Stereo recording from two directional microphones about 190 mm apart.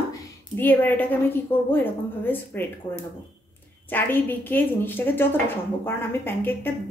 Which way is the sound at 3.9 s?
10° left (ahead or behind).